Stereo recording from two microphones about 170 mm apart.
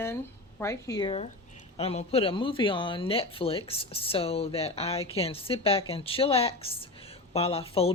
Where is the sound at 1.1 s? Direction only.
40° left (ahead or behind).